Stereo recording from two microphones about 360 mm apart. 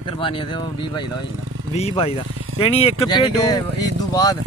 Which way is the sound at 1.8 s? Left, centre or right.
Centre.